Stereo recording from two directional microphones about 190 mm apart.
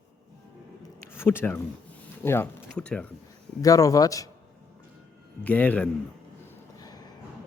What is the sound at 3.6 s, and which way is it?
Speech, 15° left (ahead or behind).